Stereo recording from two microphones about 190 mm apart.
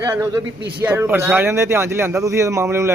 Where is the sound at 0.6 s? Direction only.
55° right (ahead or behind).